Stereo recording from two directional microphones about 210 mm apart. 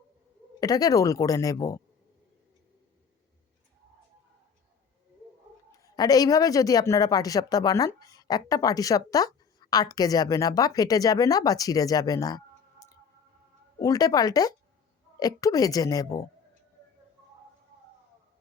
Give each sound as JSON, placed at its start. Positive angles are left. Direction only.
{"t": 0.6, "sound": "a man's voice", "side_deg": 15}
{"t": 5.7, "sound": "a man's voice", "side_deg": 15}
{"t": 13.7, "sound": "a man's voice", "side_deg": 15}